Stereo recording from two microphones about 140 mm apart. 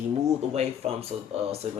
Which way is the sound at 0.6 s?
45° right (ahead or behind).